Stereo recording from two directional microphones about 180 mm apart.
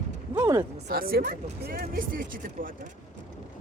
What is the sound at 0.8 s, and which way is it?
Speech, 55° right (ahead or behind).